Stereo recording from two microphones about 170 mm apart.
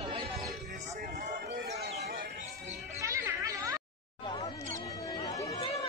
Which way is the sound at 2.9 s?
20° right (ahead or behind).